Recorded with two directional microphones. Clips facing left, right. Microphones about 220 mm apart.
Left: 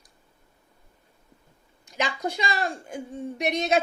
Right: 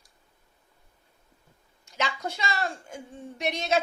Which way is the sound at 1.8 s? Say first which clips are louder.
Left 3 dB; 15° left (ahead or behind).